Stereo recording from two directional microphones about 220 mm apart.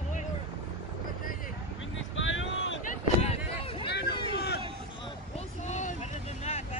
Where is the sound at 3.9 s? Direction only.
50° left (ahead or behind).